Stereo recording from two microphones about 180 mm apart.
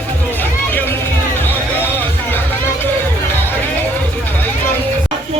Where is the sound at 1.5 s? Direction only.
10° left (ahead or behind).